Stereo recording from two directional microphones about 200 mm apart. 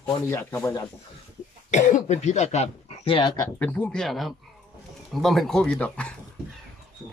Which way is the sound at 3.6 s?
5° left (ahead or behind).